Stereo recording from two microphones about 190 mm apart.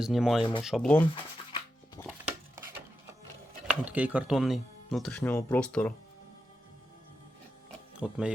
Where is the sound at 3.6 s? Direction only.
10° right (ahead or behind).